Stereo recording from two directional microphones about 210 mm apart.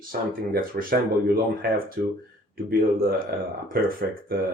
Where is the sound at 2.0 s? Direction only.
50° right (ahead or behind).